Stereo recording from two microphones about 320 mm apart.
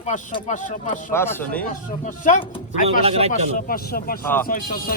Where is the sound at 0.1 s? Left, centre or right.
Left.